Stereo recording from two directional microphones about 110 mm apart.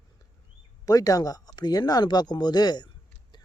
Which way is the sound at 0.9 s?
35° left (ahead or behind).